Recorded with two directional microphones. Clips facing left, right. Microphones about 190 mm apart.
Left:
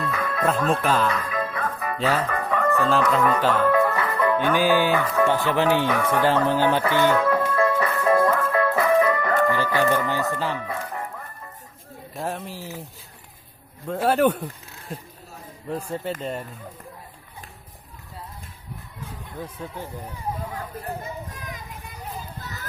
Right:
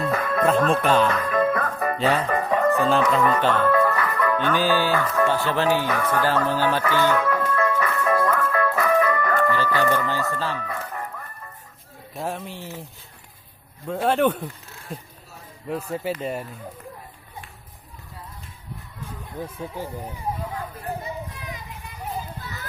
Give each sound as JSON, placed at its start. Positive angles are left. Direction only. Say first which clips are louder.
{"t": 0.0, "sound": "music", "louder": "right 4 dB", "side_deg": -45}
{"t": 0.9, "sound": "music", "louder": "right 3 dB", "side_deg": 0}
{"t": 1.2, "sound": "music", "louder": "right 6 dB", "side_deg": -50}
{"t": 2.3, "sound": "chicken", "louder": "right 3 dB", "side_deg": -20}
{"t": 2.8, "sound": "music", "louder": "right 1 dB", "side_deg": 0}
{"t": 3.7, "sound": "music", "louder": "even", "side_deg": 15}
{"t": 4.4, "sound": "music", "louder": "left 2 dB", "side_deg": 10}
{"t": 6.2, "sound": "music", "louder": "left 3 dB", "side_deg": 20}
{"t": 12.1, "sound": "music", "louder": "even", "side_deg": 0}
{"t": 13.8, "sound": "speech", "louder": "left 1 dB", "side_deg": 0}
{"t": 19.4, "sound": "speech", "louder": "right 2 dB", "side_deg": -10}
{"t": 20.7, "sound": "children playing", "louder": "right 1 dB", "side_deg": 45}